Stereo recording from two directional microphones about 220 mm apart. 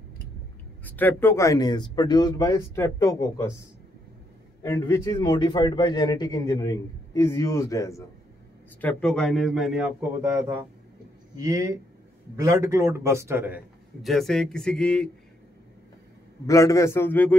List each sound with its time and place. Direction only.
0.8 s a man's voice: 10° left (ahead or behind)
4.6 s a man's voice: 10° left (ahead or behind)
8.8 s a man's voice: 5° left (ahead or behind)
14.0 s a man's voice: centre (ahead or behind)
16.4 s a man's voice: 15° left (ahead or behind)